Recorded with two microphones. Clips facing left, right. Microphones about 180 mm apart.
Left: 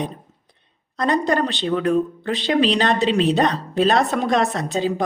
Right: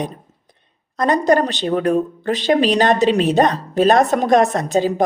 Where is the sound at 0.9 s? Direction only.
45° right (ahead or behind).